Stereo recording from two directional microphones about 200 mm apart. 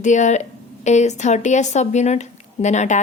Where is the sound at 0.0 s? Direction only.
35° left (ahead or behind).